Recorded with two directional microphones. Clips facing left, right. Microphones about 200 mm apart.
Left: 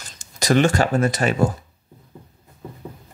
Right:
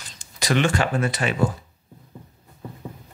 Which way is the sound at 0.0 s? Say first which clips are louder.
Left 3 dB; 45° left (ahead or behind).